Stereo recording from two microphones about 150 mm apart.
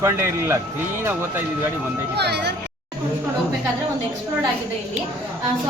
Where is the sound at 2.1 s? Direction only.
90° right.